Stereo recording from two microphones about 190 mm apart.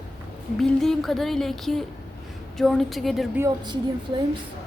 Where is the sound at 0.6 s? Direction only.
Centre (ahead or behind).